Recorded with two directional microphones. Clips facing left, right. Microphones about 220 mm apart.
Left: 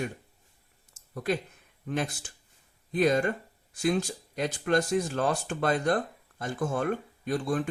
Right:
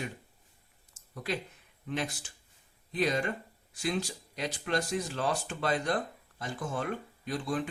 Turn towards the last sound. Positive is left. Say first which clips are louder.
# left 4 dB
turn(degrees=50)  # may be behind; listen again after turning